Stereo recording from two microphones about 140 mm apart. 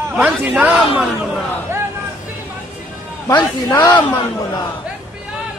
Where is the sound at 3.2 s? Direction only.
25° left (ahead or behind).